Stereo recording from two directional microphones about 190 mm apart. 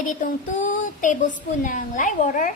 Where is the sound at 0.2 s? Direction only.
45° left (ahead or behind).